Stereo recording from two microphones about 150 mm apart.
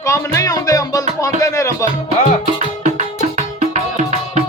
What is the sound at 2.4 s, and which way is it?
Music, 50° right (ahead or behind).